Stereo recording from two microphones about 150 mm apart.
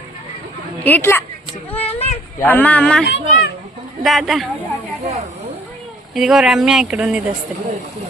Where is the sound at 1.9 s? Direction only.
45° left (ahead or behind).